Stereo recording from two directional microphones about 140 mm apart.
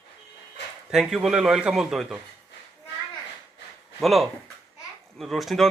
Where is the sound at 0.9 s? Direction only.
Centre (ahead or behind).